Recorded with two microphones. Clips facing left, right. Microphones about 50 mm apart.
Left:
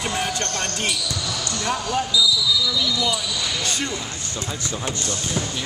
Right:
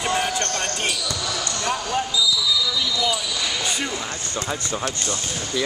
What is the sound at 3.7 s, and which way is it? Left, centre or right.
Speech, centre.